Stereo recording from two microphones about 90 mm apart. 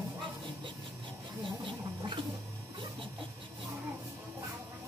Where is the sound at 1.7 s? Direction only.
60° right (ahead or behind).